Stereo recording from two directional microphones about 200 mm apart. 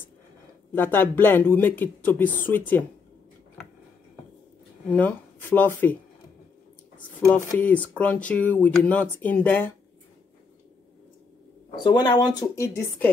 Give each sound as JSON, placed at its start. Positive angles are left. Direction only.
{"t": 0.7, "sound": "speech", "side_deg": 10}
{"t": 4.9, "sound": "speech", "side_deg": 10}
{"t": 7.2, "sound": "speech", "side_deg": 10}
{"t": 11.7, "sound": "speech", "side_deg": 20}